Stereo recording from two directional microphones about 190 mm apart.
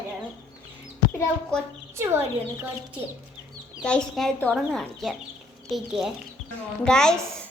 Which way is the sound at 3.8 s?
5° left (ahead or behind).